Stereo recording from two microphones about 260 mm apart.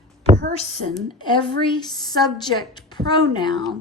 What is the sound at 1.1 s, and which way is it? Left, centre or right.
A woman's voice, centre.